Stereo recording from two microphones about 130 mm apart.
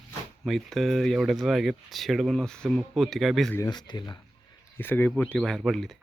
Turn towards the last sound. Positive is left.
turn(degrees=0)  # may be behind; listen again after turning